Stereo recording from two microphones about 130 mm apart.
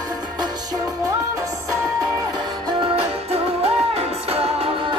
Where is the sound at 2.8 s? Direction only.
50° right (ahead or behind).